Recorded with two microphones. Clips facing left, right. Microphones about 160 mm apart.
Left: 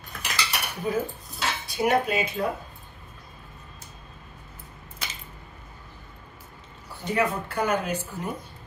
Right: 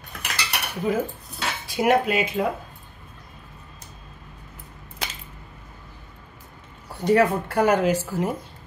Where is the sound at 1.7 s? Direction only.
90° right.